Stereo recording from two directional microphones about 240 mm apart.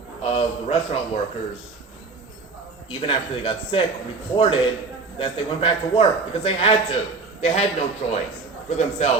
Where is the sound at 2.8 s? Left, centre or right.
Left.